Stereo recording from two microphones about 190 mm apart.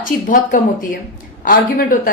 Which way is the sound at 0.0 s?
45° left (ahead or behind).